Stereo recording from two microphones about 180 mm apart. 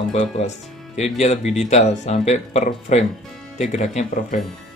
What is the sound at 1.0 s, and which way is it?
Speech, 40° left (ahead or behind).